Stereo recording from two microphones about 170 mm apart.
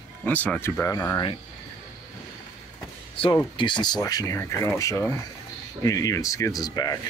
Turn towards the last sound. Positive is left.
turn(degrees=25)  # may be behind; listen again after turning